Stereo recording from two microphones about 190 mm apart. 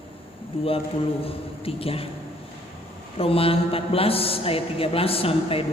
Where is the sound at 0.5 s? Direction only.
30° left (ahead or behind).